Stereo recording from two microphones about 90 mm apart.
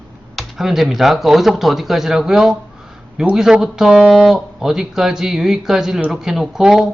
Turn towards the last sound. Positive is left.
turn(degrees=-5)  # may be behind; listen again after turning